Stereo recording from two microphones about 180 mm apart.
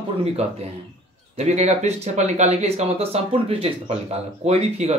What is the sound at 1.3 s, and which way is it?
Speech, 40° right (ahead or behind).